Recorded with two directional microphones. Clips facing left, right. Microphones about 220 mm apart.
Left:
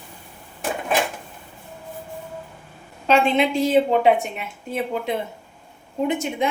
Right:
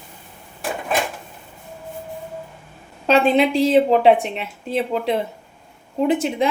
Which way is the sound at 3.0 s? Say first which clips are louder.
Right 3 dB; 35° right (ahead or behind).